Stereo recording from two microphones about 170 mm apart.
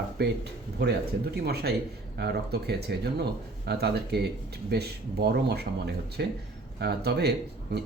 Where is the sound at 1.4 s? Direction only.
70° right (ahead or behind).